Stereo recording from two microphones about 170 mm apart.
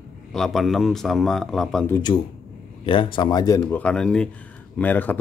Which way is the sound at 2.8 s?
30° left (ahead or behind).